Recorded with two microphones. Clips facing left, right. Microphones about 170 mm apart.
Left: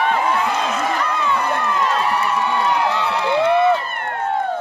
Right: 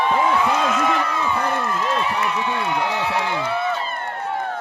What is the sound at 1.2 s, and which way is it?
Run, 70° left (ahead or behind).